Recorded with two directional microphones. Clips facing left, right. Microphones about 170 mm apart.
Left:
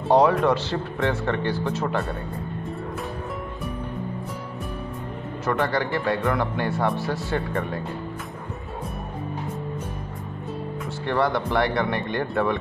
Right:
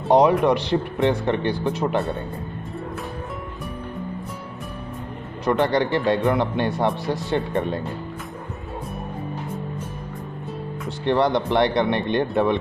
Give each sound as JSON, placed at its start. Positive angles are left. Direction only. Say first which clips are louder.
{"t": 0.1, "sound": "speech", "louder": "right 2 dB", "side_deg": -15}
{"t": 5.4, "sound": "speech", "louder": "right 4 dB", "side_deg": -20}
{"t": 11.1, "sound": "speech", "louder": "right 4 dB", "side_deg": -20}